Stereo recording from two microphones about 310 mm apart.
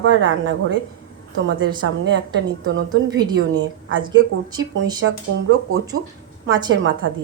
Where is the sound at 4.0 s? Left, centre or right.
Centre.